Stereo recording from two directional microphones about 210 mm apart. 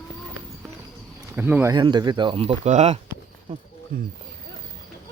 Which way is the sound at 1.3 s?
10° right (ahead or behind).